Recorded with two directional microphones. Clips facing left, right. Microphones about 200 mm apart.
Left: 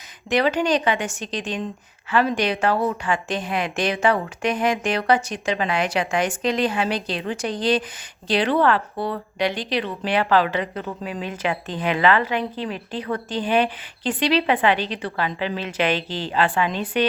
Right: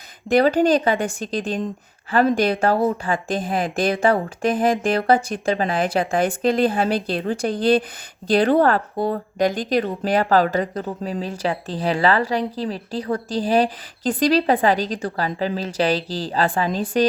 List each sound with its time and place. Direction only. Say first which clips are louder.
0.3 s speech: right 4 dB; 35° right (ahead or behind)
3.3 s a woman's voice: right 3 dB; 50° right (ahead or behind)
3.9 s speech: right 2 dB; 35° right (ahead or behind)
4.4 s a woman's voice: right 3 dB; 50° right (ahead or behind)